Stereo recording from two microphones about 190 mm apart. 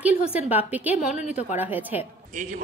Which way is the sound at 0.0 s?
5° right (ahead or behind).